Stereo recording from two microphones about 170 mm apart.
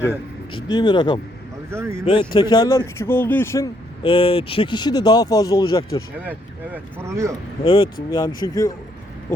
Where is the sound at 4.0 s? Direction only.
30° left (ahead or behind).